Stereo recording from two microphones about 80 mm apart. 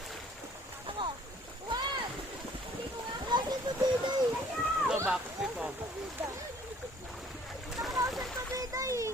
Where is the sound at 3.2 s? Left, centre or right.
Right.